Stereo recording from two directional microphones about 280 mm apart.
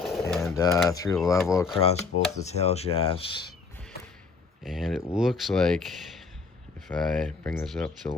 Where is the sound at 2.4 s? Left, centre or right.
Left.